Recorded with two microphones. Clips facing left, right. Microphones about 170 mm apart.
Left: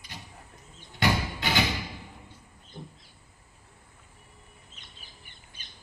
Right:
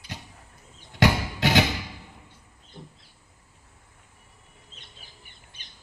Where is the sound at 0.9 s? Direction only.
90° right.